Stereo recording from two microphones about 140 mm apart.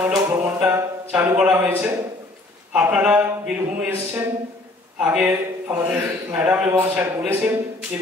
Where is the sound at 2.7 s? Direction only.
10° right (ahead or behind).